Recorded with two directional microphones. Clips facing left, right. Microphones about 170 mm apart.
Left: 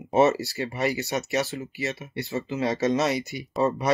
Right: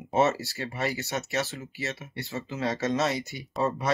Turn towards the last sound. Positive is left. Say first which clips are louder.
# left 3 dB
turn(degrees=15)  # may be behind; listen again after turning